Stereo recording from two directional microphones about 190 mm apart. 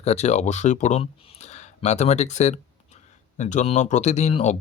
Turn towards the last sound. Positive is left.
turn(degrees=35)  # may be behind; listen again after turning